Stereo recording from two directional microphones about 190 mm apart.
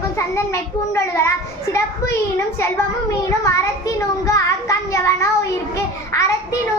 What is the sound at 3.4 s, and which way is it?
A child's voice, 15° left (ahead or behind).